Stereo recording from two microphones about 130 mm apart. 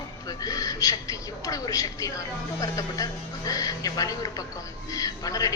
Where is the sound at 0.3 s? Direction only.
30° left (ahead or behind).